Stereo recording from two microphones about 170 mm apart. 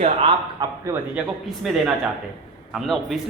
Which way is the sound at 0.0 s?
30° right (ahead or behind).